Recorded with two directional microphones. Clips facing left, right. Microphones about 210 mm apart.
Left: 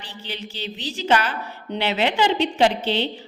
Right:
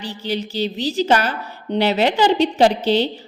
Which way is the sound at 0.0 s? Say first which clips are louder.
Right 10 dB; 40° right (ahead or behind).